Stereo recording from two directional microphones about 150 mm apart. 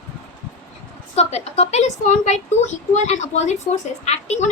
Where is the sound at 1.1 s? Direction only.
45° left (ahead or behind).